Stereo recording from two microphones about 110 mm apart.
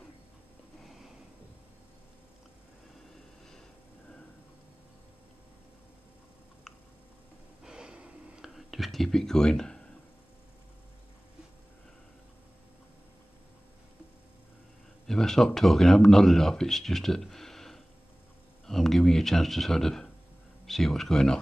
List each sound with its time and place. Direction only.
0.8 s a sound: centre (ahead or behind)
7.6 s whispering: 5° right (ahead or behind)
15.0 s speech: 5° left (ahead or behind)